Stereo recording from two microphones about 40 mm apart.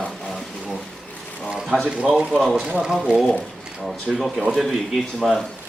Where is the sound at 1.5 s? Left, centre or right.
Centre.